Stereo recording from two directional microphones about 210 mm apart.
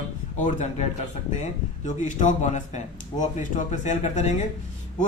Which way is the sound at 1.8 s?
35° left (ahead or behind).